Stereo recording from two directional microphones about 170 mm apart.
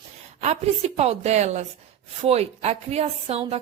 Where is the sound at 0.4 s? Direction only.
40° right (ahead or behind).